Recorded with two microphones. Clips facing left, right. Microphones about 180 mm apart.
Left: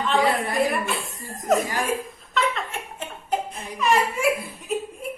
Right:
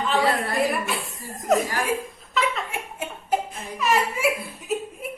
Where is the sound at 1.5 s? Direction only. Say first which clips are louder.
Even; centre (ahead or behind).